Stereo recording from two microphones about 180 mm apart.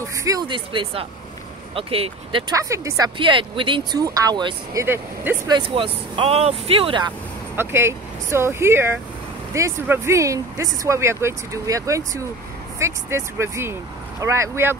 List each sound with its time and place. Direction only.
0.2 s speech: 20° right (ahead or behind)
2.5 s speech: 20° right (ahead or behind)
3.2 s speech: 30° right (ahead or behind)
4.8 s speech: 10° right (ahead or behind)
5.5 s speech: 30° right (ahead or behind)
7.5 s speech: 15° right (ahead or behind)